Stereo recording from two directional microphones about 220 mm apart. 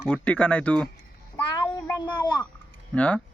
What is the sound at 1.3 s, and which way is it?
A child's voice, 15° left (ahead or behind).